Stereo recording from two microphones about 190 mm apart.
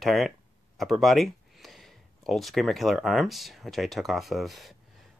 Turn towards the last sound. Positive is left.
turn(degrees=0)  # may be behind; listen again after turning